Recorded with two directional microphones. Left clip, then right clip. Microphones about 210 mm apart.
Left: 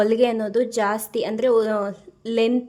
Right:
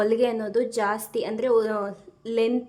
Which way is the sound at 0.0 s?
15° left (ahead or behind).